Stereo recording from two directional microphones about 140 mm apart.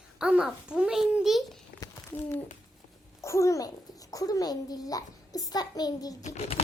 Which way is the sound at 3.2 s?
20° left (ahead or behind).